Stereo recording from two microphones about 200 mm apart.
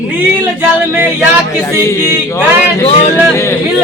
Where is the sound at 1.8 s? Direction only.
15° left (ahead or behind).